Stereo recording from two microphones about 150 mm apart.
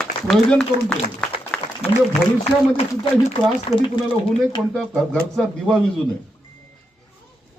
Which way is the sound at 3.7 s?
35° left (ahead or behind).